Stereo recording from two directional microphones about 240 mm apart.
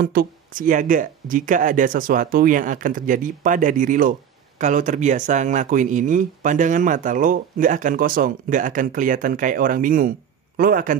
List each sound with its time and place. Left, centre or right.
0.0 s speech: right